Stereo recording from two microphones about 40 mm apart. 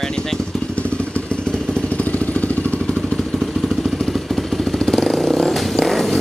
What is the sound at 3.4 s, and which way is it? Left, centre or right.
Vehicle, centre.